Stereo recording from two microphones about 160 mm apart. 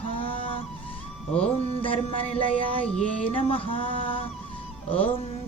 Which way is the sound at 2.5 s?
5° left (ahead or behind).